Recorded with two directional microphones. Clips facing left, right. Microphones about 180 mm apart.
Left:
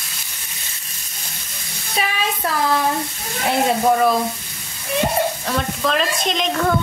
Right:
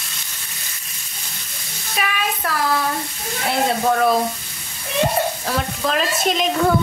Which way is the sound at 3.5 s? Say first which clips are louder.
Left 2 dB; 15° left (ahead or behind).